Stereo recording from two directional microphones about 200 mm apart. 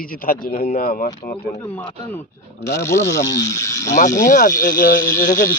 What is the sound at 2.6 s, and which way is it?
Speech, 15° left (ahead or behind).